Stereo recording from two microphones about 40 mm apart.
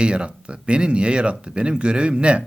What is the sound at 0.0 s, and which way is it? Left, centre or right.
A man's voice, right.